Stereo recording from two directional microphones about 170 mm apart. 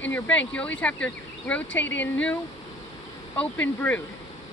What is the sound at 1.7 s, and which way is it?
Speech, 90° left.